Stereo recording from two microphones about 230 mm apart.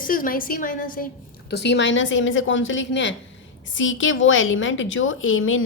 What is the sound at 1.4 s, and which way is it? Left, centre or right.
A woman's voice, left.